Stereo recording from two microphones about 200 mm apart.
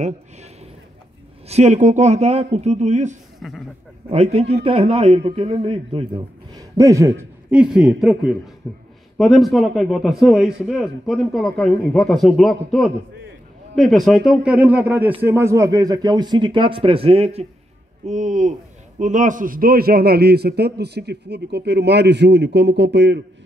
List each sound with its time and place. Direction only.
1.5 s speech: 35° right (ahead or behind)
3.3 s speech: centre (ahead or behind)
4.1 s speech: 30° right (ahead or behind)
6.5 s a man's voice: 15° right (ahead or behind); by 23.2 s 60° right (ahead or behind)